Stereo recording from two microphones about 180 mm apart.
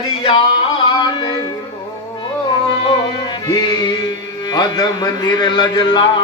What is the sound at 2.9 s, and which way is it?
Music, 25° left (ahead or behind).